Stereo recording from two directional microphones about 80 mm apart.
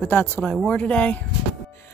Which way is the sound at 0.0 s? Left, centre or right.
Left.